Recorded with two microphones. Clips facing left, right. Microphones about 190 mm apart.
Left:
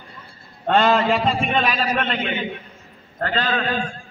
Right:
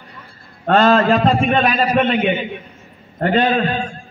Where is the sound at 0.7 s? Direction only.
10° left (ahead or behind).